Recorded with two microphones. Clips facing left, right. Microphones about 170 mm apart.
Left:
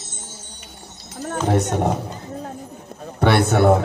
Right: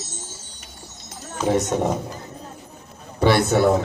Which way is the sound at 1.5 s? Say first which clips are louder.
Even; 55° left (ahead or behind).